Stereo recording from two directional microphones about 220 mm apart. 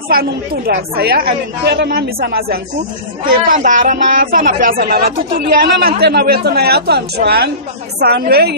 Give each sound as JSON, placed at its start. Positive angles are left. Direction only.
{"t": 0.1, "sound": "speech", "side_deg": -45}